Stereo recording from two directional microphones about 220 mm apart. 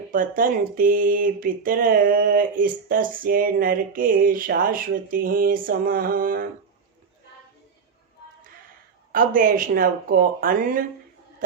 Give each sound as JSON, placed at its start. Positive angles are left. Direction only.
{"t": 0.1, "sound": "speech", "side_deg": -40}
{"t": 9.1, "sound": "speech", "side_deg": -40}